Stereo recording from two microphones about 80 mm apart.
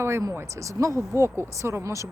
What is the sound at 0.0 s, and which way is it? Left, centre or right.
Speech, right.